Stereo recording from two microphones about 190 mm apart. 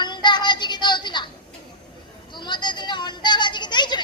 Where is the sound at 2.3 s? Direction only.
25° left (ahead or behind).